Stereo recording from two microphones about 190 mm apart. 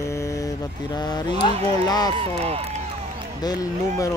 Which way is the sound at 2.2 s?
30° right (ahead or behind).